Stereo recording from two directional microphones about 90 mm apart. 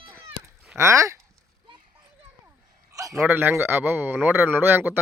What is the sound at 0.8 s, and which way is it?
Speech, 35° right (ahead or behind).